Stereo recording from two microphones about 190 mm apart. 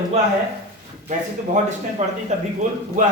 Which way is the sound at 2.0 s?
35° right (ahead or behind).